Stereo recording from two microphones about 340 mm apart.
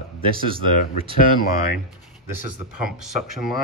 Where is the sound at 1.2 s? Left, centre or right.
Left.